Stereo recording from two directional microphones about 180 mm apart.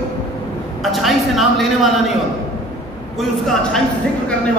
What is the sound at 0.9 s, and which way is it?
A man's voice, centre (ahead or behind).